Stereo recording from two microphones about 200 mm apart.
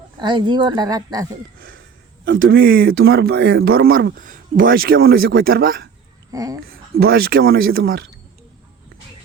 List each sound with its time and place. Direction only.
0.2 s speech: 25° right (ahead or behind)
2.6 s speech: 50° right (ahead or behind)
6.3 s speech: 15° right (ahead or behind)
6.7 s speech: 50° right (ahead or behind)